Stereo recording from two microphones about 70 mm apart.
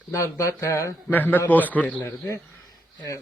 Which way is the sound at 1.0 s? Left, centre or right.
Left.